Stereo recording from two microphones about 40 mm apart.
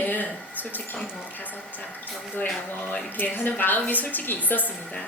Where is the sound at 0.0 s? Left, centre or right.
Left.